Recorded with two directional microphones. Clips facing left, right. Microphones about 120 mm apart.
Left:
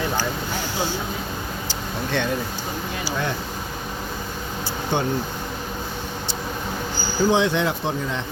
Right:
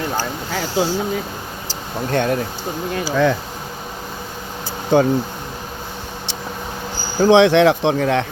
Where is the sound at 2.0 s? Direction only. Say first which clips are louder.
Right 6 dB; 45° right (ahead or behind).